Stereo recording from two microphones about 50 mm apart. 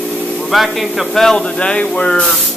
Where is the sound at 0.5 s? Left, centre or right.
Centre.